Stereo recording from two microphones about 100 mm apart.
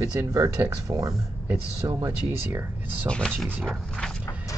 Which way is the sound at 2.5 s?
20° right (ahead or behind).